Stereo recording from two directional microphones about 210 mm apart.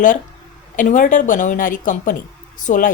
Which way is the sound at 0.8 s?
40° left (ahead or behind).